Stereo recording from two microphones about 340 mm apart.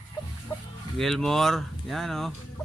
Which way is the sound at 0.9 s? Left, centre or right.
Centre.